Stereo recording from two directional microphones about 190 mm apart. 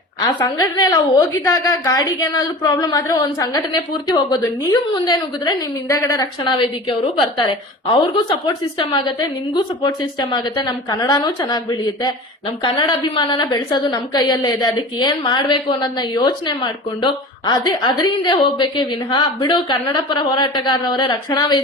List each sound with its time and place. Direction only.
0.2 s a woman's voice: 20° left (ahead or behind)